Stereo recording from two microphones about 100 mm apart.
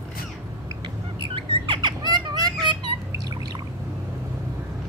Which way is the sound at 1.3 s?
60° right (ahead or behind).